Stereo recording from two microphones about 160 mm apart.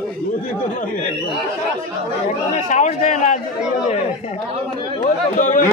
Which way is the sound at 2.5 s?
50° left (ahead or behind).